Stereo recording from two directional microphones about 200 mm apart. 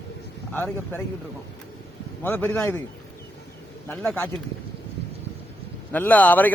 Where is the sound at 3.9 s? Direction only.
5° left (ahead or behind).